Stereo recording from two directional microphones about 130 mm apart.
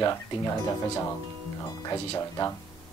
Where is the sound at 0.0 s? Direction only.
25° left (ahead or behind).